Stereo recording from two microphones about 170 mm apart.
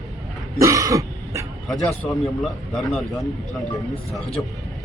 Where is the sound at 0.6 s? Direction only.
20° right (ahead or behind).